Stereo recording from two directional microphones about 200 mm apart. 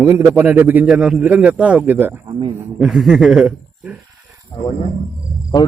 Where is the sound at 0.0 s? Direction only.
15° right (ahead or behind).